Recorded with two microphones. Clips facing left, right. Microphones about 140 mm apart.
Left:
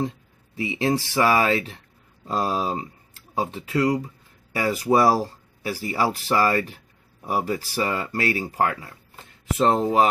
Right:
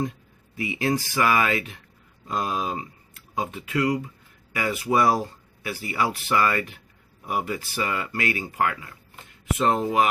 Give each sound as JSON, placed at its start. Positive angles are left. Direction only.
{"t": 0.5, "sound": "speech", "side_deg": 25}